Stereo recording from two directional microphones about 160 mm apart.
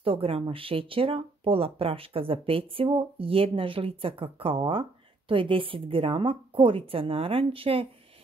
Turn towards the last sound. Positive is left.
turn(degrees=-35)  # may be behind; listen again after turning